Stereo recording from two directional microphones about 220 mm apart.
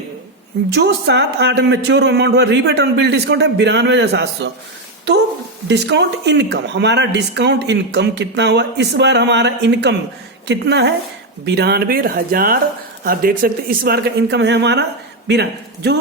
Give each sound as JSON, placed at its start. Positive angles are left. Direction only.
{"t": 0.7, "sound": "speech", "side_deg": -50}
{"t": 5.6, "sound": "speech", "side_deg": -50}